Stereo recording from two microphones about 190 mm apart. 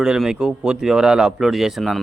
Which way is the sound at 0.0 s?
5° right (ahead or behind).